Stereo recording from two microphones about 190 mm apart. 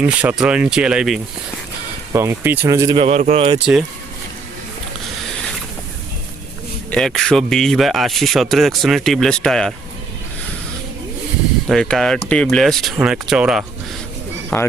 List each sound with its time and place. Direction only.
0.0 s speech: 5° right (ahead or behind)
3.0 s speech: 35° right (ahead or behind)
6.9 s speech: centre (ahead or behind)
11.7 s speech: 5° left (ahead or behind)